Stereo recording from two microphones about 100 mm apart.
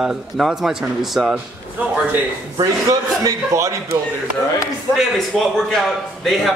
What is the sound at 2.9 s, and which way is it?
A man's voice, 35° right (ahead or behind).